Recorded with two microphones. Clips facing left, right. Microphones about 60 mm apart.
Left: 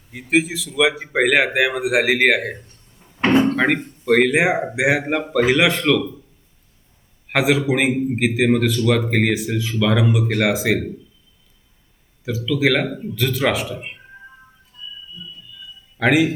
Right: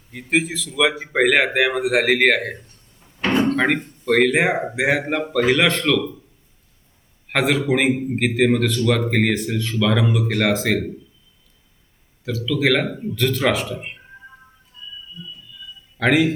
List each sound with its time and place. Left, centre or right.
0.1 s speech: centre
3.2 s a sound: left
3.4 s a man's voice: centre
7.3 s speech: centre
12.2 s speech: centre
16.0 s speech: centre